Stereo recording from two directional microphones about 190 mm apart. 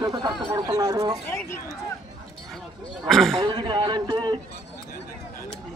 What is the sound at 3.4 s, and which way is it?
A man's voice, 25° right (ahead or behind).